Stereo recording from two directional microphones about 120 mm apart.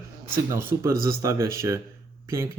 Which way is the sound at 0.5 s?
20° right (ahead or behind).